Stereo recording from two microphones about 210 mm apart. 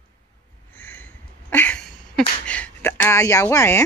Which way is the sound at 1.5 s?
10° left (ahead or behind).